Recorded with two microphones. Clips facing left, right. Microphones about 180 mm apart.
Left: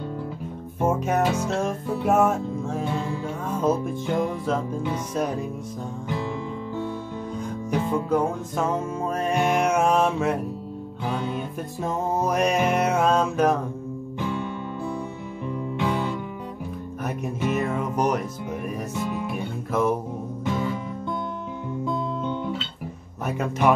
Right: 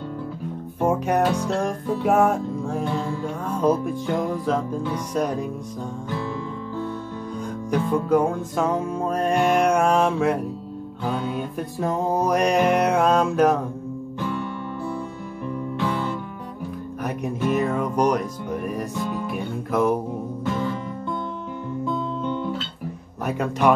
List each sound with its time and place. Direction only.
0.8 s music: centre (ahead or behind)
7.3 s music: 5° left (ahead or behind)
14.2 s music: 20° left (ahead or behind)
17.0 s music: 5° left (ahead or behind)
23.2 s music: 5° left (ahead or behind)